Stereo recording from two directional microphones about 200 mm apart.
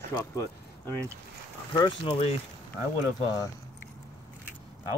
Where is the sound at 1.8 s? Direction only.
25° left (ahead or behind).